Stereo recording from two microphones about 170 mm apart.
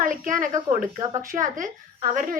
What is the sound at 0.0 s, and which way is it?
A woman's voice, 50° right (ahead or behind).